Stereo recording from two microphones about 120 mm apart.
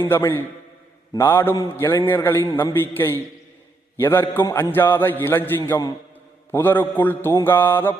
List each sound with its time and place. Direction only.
0.0 s a man's voice: 20° left (ahead or behind)
4.7 s mantra: 20° left (ahead or behind)